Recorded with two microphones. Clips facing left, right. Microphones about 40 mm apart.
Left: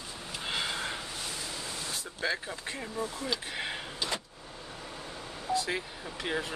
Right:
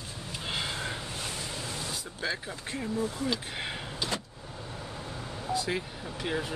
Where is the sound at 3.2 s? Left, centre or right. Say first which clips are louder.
Right 2 dB; centre.